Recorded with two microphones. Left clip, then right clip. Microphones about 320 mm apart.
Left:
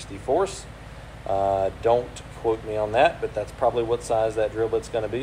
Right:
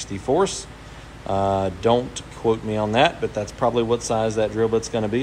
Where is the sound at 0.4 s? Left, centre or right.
Right.